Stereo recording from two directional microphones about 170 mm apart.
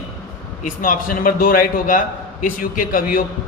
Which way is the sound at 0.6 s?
50° left (ahead or behind).